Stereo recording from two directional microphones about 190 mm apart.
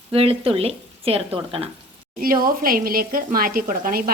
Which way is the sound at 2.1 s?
50° right (ahead or behind).